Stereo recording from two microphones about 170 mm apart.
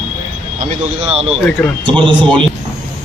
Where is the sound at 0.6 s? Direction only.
45° right (ahead or behind).